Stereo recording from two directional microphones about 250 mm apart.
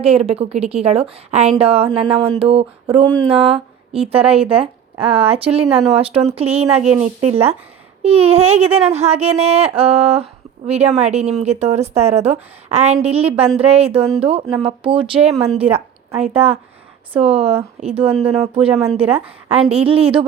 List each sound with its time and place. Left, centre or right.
0.0 s a woman's voice: right